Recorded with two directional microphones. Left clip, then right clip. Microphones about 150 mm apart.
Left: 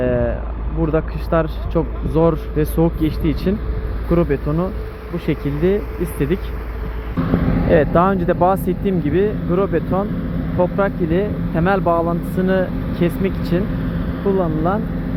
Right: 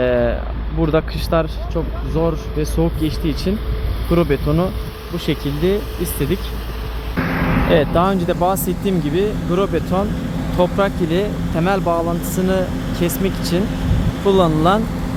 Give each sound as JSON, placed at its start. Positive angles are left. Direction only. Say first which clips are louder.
{"t": 0.0, "sound": "a sound", "louder": "right 3 dB", "side_deg": -20}
{"t": 1.3, "sound": "speech", "louder": "even", "side_deg": -5}
{"t": 1.7, "sound": "speech", "louder": "left 5 dB", "side_deg": 15}
{"t": 4.1, "sound": "speech", "louder": "right 1 dB", "side_deg": -15}
{"t": 5.2, "sound": "speech", "louder": "even", "side_deg": -5}
{"t": 7.2, "sound": "vehicle", "louder": "right 2 dB", "side_deg": 50}
{"t": 7.7, "sound": "speech", "louder": "left 2 dB", "side_deg": -5}
{"t": 14.3, "sound": "speech", "louder": "right 4 dB", "side_deg": -35}